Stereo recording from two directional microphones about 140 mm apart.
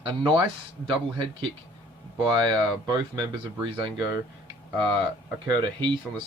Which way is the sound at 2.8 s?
30° right (ahead or behind).